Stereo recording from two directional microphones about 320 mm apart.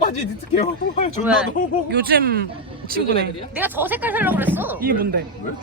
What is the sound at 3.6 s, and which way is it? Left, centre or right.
Speech, centre.